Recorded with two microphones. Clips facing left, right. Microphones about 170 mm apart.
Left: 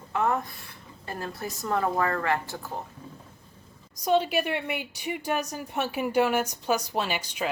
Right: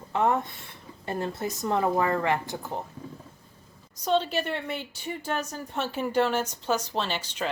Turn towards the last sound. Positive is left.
turn(degrees=10)  # may be behind; listen again after turning